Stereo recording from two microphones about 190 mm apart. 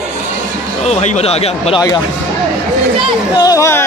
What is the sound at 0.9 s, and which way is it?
Speech, 35° left (ahead or behind).